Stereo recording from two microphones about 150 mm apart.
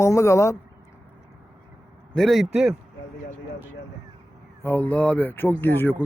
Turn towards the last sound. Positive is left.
turn(degrees=15)  # may be behind; listen again after turning